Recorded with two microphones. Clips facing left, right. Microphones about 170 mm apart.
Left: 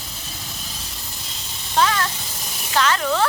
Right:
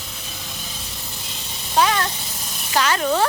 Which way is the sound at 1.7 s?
15° right (ahead or behind).